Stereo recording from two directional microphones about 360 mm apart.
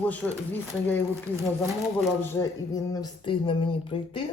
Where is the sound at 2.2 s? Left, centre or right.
Centre.